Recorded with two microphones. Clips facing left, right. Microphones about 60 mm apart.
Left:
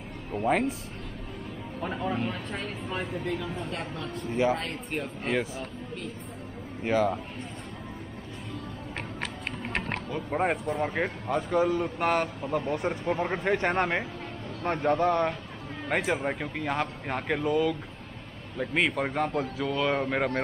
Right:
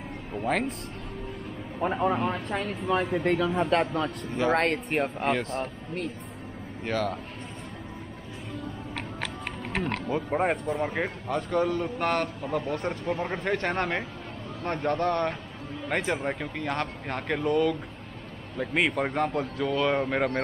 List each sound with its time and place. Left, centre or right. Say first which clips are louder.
0.4 s speech: left 2 dB; centre
1.8 s a man's voice: right 5 dB; right
2.9 s speech: right 8 dB; right
6.8 s speech: left 4 dB; centre
10.3 s speech: even; centre